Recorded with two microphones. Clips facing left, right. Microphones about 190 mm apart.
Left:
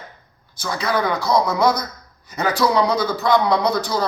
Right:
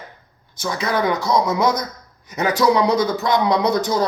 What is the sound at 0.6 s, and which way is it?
Speech, 20° right (ahead or behind).